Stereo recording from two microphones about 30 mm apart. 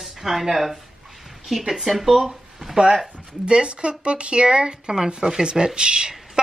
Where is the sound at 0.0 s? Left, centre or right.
Centre.